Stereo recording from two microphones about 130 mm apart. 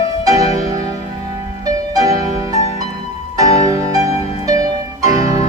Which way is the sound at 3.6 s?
25° right (ahead or behind).